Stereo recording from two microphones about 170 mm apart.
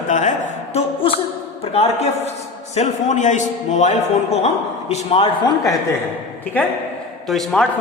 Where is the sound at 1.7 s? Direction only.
35° left (ahead or behind).